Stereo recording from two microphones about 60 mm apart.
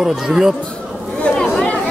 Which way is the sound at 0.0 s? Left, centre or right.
Centre.